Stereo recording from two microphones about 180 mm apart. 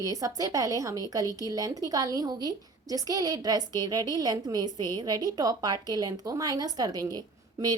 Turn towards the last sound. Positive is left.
turn(degrees=-20)  # may be behind; listen again after turning